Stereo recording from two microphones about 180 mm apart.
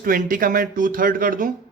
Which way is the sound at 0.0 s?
50° right (ahead or behind).